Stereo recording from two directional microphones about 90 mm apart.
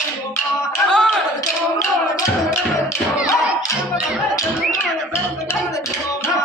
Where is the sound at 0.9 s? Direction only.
10° left (ahead or behind).